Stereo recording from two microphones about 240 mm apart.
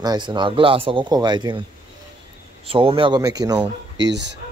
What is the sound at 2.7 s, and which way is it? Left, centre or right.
A man's voice, right.